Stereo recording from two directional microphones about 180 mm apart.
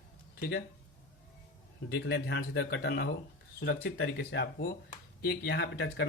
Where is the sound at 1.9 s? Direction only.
65° left (ahead or behind); by 4.4 s 90° left.